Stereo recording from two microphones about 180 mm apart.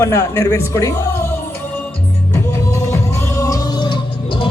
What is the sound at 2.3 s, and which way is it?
Music, 15° left (ahead or behind).